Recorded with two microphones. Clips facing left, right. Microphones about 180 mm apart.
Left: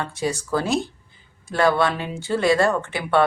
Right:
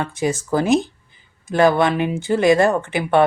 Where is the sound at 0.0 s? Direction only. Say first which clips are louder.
Right 4 dB; 20° right (ahead or behind).